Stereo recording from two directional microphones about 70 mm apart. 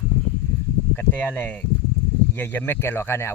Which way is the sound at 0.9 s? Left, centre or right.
Left.